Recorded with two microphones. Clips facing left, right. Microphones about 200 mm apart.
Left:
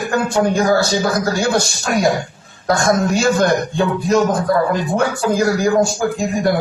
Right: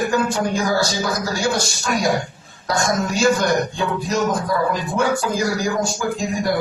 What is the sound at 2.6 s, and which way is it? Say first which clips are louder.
A man's voice: left 5 dB; 55° left (ahead or behind).